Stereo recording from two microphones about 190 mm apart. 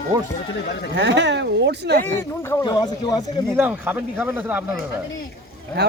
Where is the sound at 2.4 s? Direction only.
20° left (ahead or behind).